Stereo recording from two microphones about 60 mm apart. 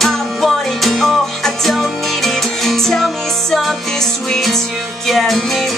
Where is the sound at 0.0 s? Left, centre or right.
Centre.